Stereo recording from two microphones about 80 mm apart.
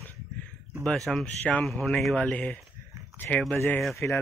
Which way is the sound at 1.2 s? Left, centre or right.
Centre.